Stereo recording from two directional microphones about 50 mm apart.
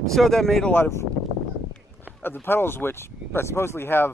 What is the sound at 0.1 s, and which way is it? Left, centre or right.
Speech, centre.